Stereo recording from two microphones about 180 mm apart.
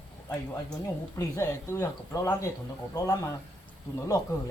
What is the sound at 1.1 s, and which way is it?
Speech, 15° left (ahead or behind).